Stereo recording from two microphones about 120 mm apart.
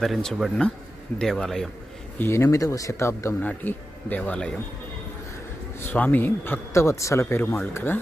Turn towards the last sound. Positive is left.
turn(degrees=15)  # may be behind; listen again after turning